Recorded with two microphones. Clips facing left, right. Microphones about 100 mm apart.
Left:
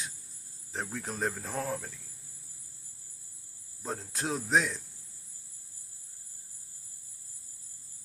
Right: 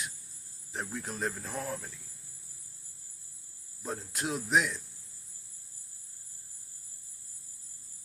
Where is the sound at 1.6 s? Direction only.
60° left (ahead or behind).